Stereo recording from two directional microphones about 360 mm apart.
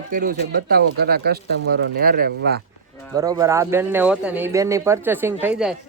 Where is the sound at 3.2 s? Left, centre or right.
Centre.